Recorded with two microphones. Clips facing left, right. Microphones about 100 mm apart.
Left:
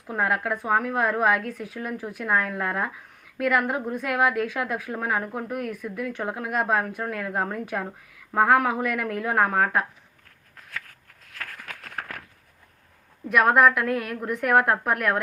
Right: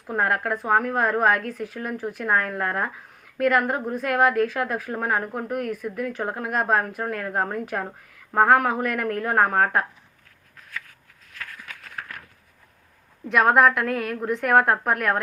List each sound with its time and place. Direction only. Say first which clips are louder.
0.1 s a woman's voice: right 1 dB; centre (ahead or behind)
11.3 s a sound: left 1 dB; 55° left (ahead or behind)
13.2 s a woman's voice: right 1 dB; 5° left (ahead or behind)